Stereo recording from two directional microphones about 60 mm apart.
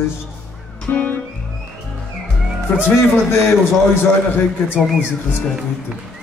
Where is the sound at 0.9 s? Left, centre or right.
Left.